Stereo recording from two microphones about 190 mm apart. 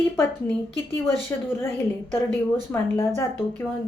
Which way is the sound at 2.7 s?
15° left (ahead or behind).